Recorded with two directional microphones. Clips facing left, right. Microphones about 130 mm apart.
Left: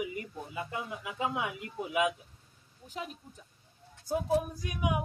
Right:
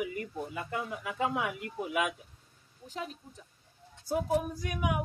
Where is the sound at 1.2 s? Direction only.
15° left (ahead or behind).